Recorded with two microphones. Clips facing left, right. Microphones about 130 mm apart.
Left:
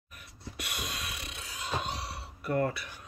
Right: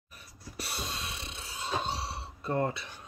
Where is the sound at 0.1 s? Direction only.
30° right (ahead or behind).